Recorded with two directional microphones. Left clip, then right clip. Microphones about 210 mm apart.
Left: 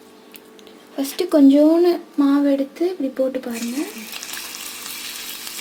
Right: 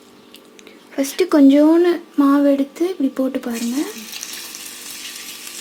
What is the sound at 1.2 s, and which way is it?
Speech, 30° right (ahead or behind).